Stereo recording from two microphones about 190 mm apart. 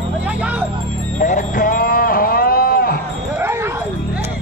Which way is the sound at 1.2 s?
40° left (ahead or behind).